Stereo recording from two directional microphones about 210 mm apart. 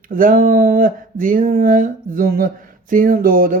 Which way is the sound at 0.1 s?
40° right (ahead or behind).